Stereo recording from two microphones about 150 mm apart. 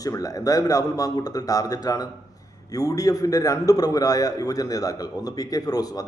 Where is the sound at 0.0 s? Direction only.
25° left (ahead or behind).